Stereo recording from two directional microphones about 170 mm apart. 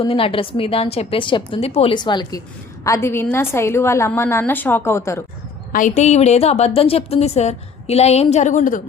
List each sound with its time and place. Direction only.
0.0 s a woman's voice: 30° left (ahead or behind); by 5.2 s 15° left (ahead or behind)
5.7 s a woman's voice: 45° left (ahead or behind)